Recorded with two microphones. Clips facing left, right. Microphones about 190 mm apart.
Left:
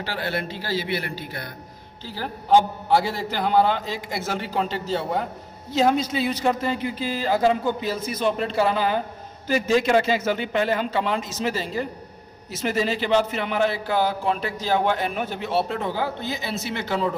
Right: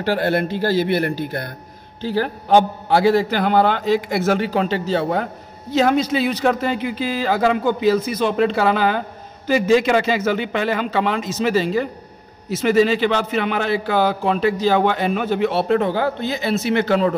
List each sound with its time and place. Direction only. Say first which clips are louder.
0.0 s a man's voice: right 9 dB; 55° right (ahead or behind)
2.0 s a man's voice: right 11 dB; 70° right (ahead or behind)